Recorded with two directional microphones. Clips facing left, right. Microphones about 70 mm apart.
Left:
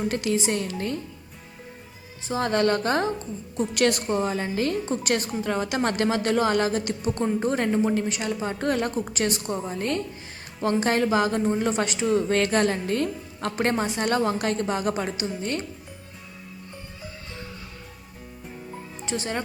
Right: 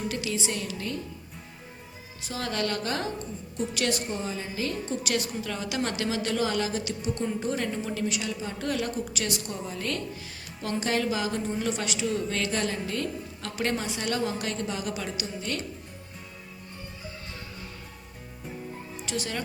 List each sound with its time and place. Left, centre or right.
0.1 s a woman's voice: left
2.2 s a woman's voice: left
3.6 s a woman's voice: left
19.0 s speech: left